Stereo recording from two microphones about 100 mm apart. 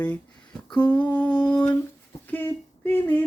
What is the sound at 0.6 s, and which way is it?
Humming, 15° left (ahead or behind).